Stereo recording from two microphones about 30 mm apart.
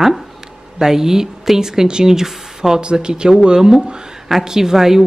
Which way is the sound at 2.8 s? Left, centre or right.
Right.